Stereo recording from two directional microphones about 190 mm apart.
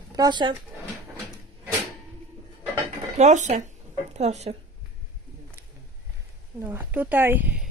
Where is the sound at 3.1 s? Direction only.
35° right (ahead or behind).